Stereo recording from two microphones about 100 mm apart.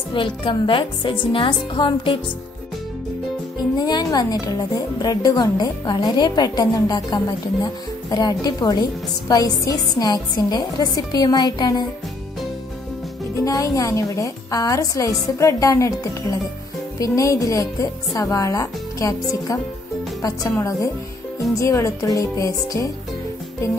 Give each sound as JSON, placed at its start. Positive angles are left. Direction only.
{"t": 0.1, "sound": "speech", "side_deg": 55}
{"t": 3.7, "sound": "a woman's voice", "side_deg": 45}
{"t": 13.4, "sound": "a woman's voice", "side_deg": 35}